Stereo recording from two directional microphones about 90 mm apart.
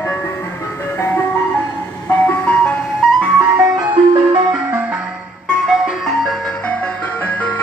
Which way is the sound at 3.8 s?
70° right (ahead or behind).